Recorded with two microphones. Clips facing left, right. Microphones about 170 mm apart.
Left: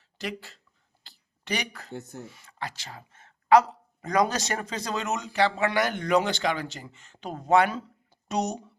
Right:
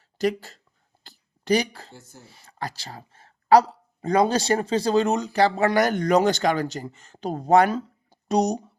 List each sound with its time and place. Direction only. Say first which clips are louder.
0.0 s a sound: right 11 dB; 40° right (ahead or behind)
1.9 s speech: left 9 dB; 65° left (ahead or behind)
2.2 s speech: right 3 dB; 35° right (ahead or behind)